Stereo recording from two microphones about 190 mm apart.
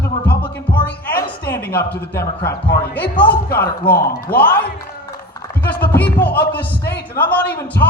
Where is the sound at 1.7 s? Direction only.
55° left (ahead or behind).